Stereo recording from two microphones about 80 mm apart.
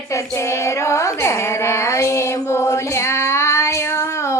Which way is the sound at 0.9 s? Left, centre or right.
Left.